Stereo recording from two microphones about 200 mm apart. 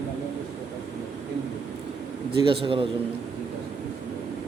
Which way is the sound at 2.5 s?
25° right (ahead or behind).